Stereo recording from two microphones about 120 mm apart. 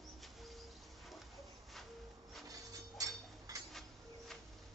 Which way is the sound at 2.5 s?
30° right (ahead or behind).